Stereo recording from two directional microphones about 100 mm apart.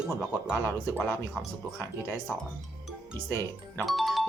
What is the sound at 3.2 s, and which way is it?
Speech, 20° left (ahead or behind).